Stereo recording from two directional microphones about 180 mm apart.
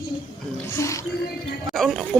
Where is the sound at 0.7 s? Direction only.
15° left (ahead or behind).